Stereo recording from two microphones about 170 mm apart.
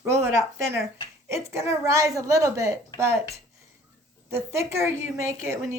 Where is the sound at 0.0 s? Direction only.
15° right (ahead or behind).